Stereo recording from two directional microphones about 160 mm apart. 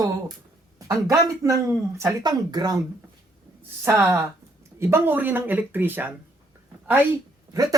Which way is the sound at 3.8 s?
15° right (ahead or behind).